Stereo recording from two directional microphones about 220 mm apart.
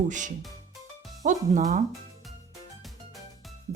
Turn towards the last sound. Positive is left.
turn(degrees=0)  # may be behind; listen again after turning